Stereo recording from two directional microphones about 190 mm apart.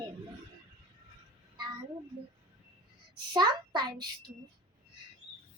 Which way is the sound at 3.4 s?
20° right (ahead or behind).